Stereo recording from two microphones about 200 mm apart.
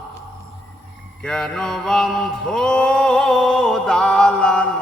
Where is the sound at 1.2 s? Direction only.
5° left (ahead or behind).